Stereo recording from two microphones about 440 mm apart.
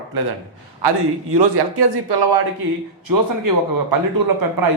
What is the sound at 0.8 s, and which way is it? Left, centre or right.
A man's voice, right.